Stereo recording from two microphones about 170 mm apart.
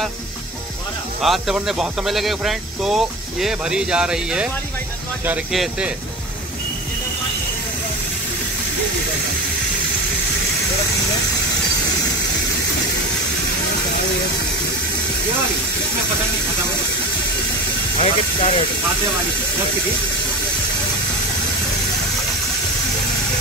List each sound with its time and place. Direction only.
1.2 s speech: centre (ahead or behind)
17.9 s speech: 35° left (ahead or behind)